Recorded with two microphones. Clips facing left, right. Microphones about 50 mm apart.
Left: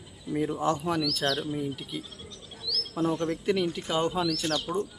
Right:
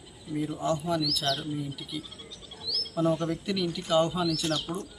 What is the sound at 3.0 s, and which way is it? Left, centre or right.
Speech, centre.